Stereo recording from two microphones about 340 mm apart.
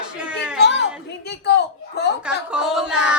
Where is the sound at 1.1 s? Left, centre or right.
Left.